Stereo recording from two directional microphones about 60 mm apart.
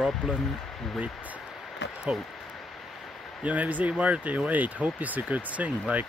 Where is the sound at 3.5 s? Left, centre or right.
Right.